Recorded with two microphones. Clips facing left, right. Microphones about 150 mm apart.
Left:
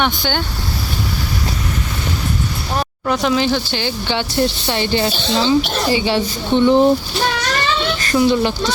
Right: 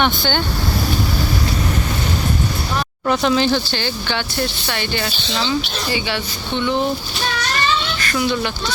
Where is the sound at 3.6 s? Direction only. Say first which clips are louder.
Left 2 dB; 20° left (ahead or behind); by 6.9 s 35° left (ahead or behind).